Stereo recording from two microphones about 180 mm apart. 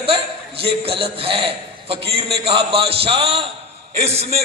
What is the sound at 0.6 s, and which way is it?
A man's voice, 30° right (ahead or behind).